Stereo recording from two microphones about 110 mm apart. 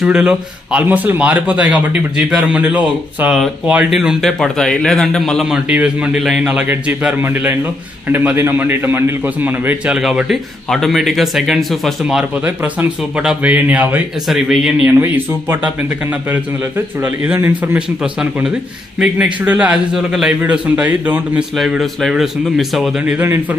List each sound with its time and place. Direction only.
0.0 s a man's voice: 10° right (ahead or behind)
5.5 s a man's voice: 10° right (ahead or behind)
14.3 s a man's voice: 5° right (ahead or behind)
15.0 s a man's voice: 20° right (ahead or behind)
19.9 s a man's voice: 5° right (ahead or behind)
21.5 s a man's voice: 5° right (ahead or behind)
23.1 s speech: 25° right (ahead or behind)